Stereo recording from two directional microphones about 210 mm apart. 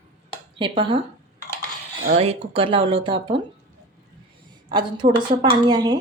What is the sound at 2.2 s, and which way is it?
Speech, 30° right (ahead or behind).